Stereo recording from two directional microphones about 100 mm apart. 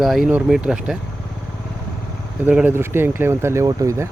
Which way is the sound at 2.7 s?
25° right (ahead or behind).